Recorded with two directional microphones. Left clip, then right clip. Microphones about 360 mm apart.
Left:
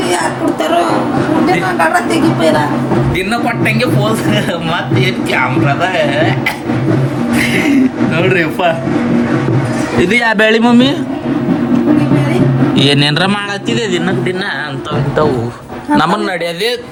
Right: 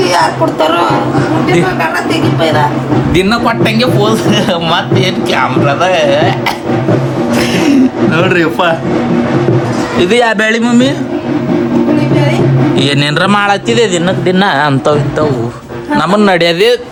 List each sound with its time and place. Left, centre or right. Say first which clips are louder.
3.2 s speech: right 4 dB; centre
8.2 s speech: right 1 dB; centre
10.0 s speech: right 1 dB; centre
12.7 s speech: left 3 dB; centre
16.2 s speech: right 8 dB; centre